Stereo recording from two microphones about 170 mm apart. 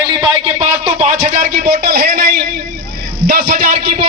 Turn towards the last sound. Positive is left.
turn(degrees=-55)  # may be behind; listen again after turning